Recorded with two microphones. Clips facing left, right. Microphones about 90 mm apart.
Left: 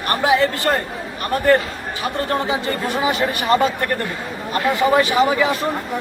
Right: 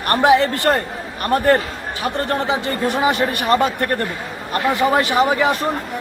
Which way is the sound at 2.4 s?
65° right (ahead or behind).